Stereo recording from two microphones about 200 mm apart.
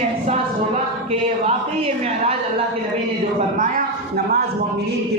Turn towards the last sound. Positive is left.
turn(degrees=-40)  # may be behind; listen again after turning